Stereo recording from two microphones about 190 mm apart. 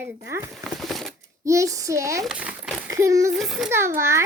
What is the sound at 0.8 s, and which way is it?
Shuffling cards, centre (ahead or behind).